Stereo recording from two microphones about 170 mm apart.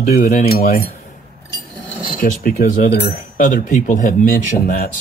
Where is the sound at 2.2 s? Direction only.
55° left (ahead or behind).